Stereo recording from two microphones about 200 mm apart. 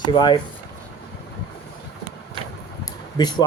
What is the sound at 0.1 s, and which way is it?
Speech, 25° left (ahead or behind).